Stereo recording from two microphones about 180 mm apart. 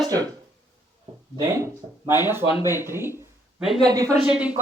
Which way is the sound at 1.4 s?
15° right (ahead or behind).